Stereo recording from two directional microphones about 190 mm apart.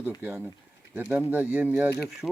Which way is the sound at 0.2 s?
10° right (ahead or behind).